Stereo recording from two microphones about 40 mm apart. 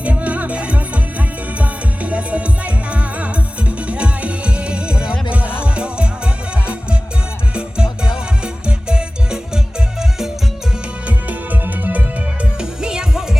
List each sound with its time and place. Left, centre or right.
0.0 s music: right
11.0 s music: right
12.5 s music: centre